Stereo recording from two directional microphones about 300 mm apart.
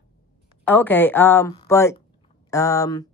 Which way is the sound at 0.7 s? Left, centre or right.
Centre.